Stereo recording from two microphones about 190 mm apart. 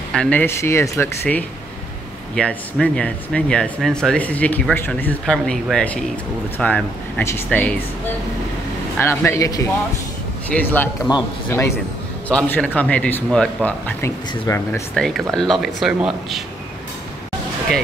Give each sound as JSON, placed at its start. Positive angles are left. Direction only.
{"t": 0.1, "sound": "speech", "side_deg": 5}
{"t": 9.0, "sound": "speech", "side_deg": 15}
{"t": 11.1, "sound": "speech", "side_deg": 20}
{"t": 11.4, "sound": "speech", "side_deg": 10}